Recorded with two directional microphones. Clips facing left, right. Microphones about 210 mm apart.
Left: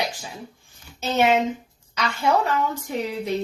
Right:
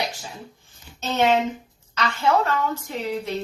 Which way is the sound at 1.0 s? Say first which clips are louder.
Left 1 dB; 10° left (ahead or behind).